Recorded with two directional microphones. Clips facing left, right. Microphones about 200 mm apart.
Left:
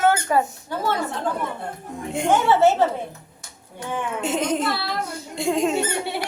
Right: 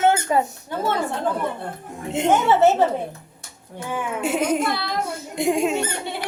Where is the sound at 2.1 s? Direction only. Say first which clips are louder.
Right 1 dB; 20° right (ahead or behind).